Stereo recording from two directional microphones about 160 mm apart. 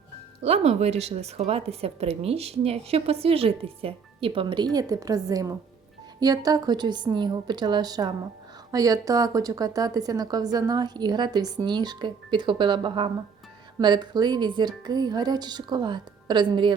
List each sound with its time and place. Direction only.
0.4 s a woman's voice: 40° right (ahead or behind)